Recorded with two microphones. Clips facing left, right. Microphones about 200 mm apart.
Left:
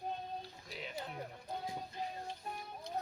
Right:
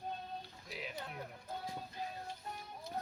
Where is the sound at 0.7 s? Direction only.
5° right (ahead or behind).